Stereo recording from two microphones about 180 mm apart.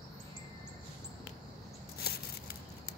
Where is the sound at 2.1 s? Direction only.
60° left (ahead or behind).